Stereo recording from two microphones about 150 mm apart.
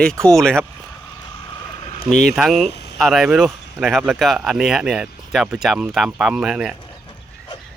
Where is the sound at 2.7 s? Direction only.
90° left.